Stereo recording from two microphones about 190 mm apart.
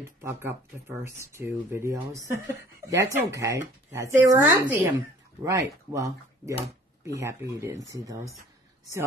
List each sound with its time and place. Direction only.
0.2 s speech: 15° right (ahead or behind)